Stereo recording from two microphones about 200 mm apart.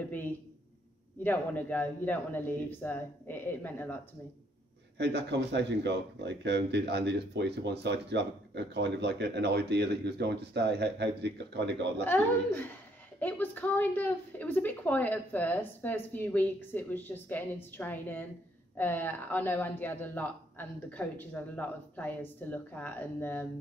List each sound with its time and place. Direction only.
1.2 s a woman's voice: 10° left (ahead or behind)
4.9 s speech: 60° right (ahead or behind)
12.0 s a woman's voice: 10° left (ahead or behind)